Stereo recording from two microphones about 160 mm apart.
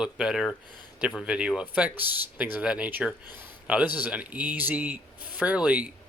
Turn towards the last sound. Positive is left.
turn(degrees=-10)  # may be behind; listen again after turning